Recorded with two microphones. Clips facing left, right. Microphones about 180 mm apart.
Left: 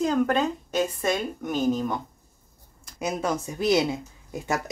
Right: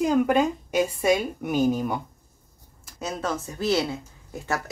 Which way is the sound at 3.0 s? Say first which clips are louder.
Left 2 dB; 15° left (ahead or behind).